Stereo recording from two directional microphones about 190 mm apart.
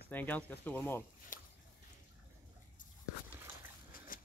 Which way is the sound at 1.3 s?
45° left (ahead or behind).